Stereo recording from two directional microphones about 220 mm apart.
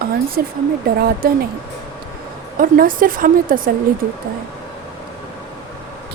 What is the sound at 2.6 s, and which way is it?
A woman's voice, 40° right (ahead or behind).